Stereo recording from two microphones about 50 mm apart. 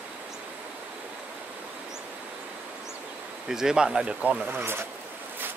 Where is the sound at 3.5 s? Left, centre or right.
Centre.